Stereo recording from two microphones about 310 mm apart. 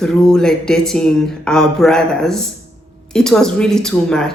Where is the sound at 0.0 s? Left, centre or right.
Centre.